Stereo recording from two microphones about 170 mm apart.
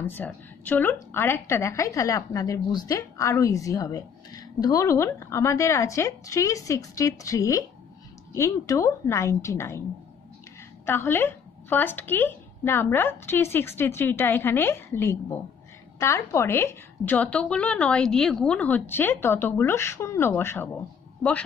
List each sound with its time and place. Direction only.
0.0 s a woman's voice: 10° left (ahead or behind)
10.9 s a woman's voice: 15° left (ahead or behind)